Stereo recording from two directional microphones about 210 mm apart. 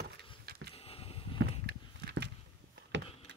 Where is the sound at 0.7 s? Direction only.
30° left (ahead or behind).